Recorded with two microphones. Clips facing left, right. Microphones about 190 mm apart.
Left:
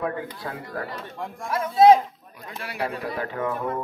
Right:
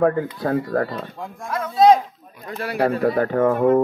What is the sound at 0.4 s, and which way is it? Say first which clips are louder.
Speech: right 12 dB; 50° right (ahead or behind).